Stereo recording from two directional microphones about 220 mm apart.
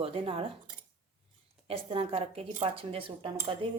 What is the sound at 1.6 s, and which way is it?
A woman's voice, 25° right (ahead or behind).